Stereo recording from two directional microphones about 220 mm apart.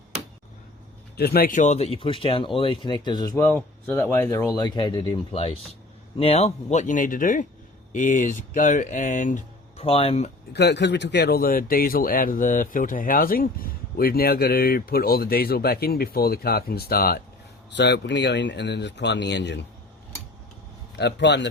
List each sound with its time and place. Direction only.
1.1 s speech: 45° left (ahead or behind); by 10.3 s 30° left (ahead or behind)
10.5 s speech: 50° left (ahead or behind)
20.9 s speech: 50° left (ahead or behind)